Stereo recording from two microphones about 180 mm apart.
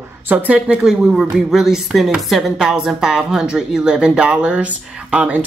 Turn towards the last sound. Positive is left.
turn(degrees=-5)  # may be behind; listen again after turning